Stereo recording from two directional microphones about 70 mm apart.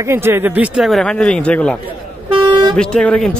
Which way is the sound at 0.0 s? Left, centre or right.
Right.